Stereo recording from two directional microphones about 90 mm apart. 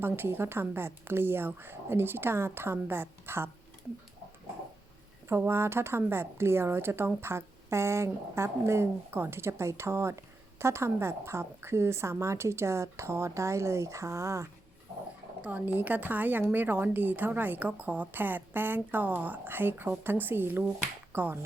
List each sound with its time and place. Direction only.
0.0 s speech: 25° right (ahead or behind)
5.5 s a woman's voice: 30° right (ahead or behind)
15.4 s speech: 15° right (ahead or behind)